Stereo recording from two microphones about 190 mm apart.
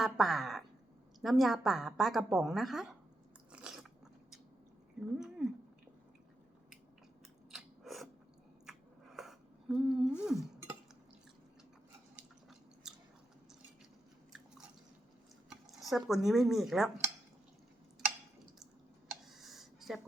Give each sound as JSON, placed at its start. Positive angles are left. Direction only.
{"t": 0.0, "sound": "a woman's voice", "side_deg": 0}
{"t": 3.5, "sound": "biting", "side_deg": -5}
{"t": 4.9, "sound": "a sound", "side_deg": -5}
{"t": 7.5, "sound": "scissors", "side_deg": 0}
{"t": 9.1, "sound": "humming", "side_deg": 0}
{"t": 10.2, "sound": "a sound", "side_deg": 0}
{"t": 12.1, "sound": "chewing", "side_deg": -5}
{"t": 15.4, "sound": "speech", "side_deg": 0}
{"t": 19.2, "sound": "a sound", "side_deg": 0}